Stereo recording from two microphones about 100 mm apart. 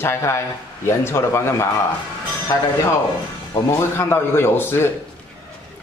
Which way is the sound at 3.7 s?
25° left (ahead or behind).